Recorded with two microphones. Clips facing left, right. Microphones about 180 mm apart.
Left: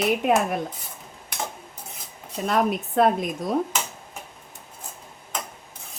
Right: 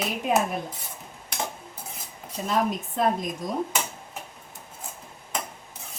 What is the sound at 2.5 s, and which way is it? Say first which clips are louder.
Speech: left 3 dB; 65° left (ahead or behind).